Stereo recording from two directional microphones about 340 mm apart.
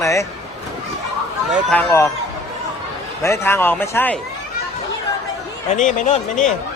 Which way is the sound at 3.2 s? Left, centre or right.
Centre.